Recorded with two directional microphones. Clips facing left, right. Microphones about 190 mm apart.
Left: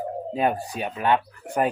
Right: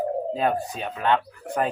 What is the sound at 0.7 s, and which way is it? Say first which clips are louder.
Speech: left 1 dB; 10° left (ahead or behind).